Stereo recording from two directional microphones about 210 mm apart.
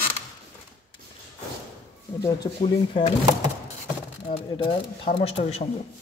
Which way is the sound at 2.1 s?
20° left (ahead or behind).